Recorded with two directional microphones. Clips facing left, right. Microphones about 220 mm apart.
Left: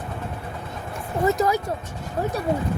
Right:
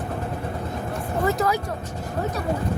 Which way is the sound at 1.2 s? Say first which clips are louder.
Left 2 dB; 25° left (ahead or behind).